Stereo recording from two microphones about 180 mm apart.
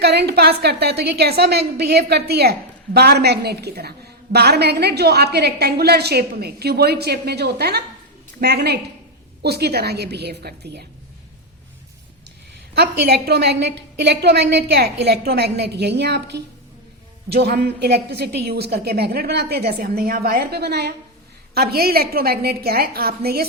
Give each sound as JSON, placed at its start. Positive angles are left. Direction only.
{"t": 0.0, "sound": "a woman's voice", "side_deg": -65}
{"t": 12.7, "sound": "a woman's voice", "side_deg": -65}